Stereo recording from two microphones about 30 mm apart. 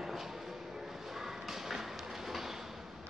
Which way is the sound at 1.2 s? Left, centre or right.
Centre.